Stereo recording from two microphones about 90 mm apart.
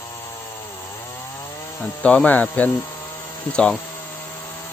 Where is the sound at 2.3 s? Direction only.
20° left (ahead or behind).